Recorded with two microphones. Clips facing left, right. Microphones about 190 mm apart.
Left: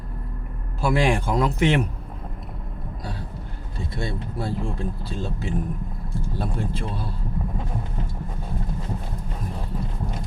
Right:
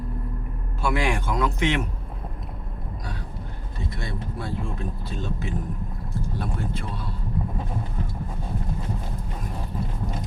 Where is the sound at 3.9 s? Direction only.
30° left (ahead or behind).